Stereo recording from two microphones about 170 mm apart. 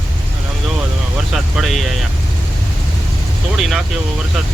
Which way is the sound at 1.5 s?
Centre (ahead or behind).